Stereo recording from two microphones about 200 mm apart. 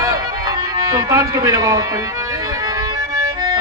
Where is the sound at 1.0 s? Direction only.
15° right (ahead or behind).